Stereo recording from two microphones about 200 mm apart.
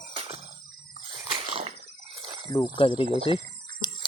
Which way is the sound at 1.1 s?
25° right (ahead or behind).